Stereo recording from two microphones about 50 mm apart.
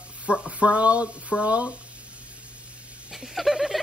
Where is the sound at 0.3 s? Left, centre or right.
Right.